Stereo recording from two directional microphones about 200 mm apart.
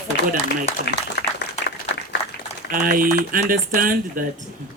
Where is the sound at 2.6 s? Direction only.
45° right (ahead or behind).